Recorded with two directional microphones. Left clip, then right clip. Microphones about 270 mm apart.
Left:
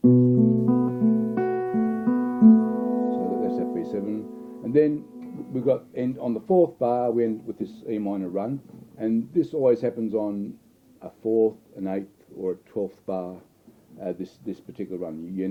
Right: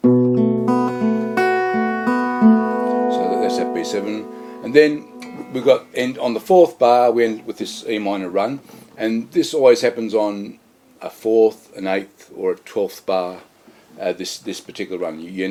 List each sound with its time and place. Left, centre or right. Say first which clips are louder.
0.0 s music: right 4 dB; centre
6.7 s speech: right 10 dB; centre
11.3 s speech: right 7 dB; right
11.8 s speech: right 10 dB; centre